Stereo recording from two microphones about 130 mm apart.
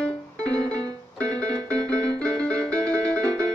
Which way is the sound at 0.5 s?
25° right (ahead or behind).